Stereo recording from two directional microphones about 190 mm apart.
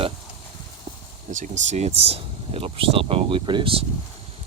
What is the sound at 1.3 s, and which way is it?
Speech, 40° right (ahead or behind).